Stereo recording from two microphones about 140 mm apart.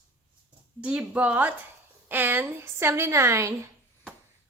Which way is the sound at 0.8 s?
10° right (ahead or behind).